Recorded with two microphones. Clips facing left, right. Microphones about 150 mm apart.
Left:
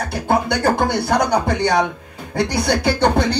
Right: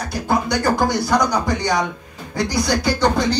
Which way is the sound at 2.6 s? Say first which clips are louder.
Left 2 dB; 60° left (ahead or behind).